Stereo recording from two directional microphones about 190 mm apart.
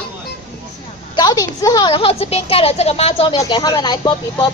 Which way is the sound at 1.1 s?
20° left (ahead or behind).